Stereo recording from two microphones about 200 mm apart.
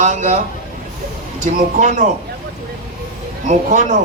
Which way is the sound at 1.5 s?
40° right (ahead or behind).